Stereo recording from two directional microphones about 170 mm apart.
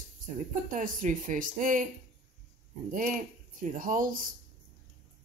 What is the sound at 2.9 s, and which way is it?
Speech, 50° right (ahead or behind).